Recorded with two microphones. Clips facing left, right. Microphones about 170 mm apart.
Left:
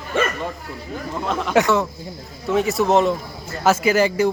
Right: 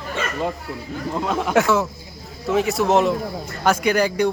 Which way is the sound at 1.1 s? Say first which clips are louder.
Even; 10° right (ahead or behind).